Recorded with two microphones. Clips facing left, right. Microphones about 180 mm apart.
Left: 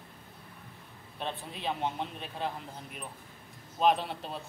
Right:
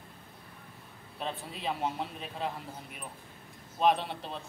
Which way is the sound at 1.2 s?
Centre (ahead or behind).